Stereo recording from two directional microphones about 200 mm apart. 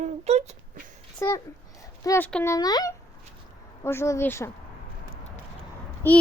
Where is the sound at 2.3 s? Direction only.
5° left (ahead or behind).